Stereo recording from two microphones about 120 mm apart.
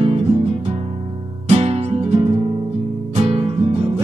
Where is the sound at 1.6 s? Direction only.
65° right (ahead or behind).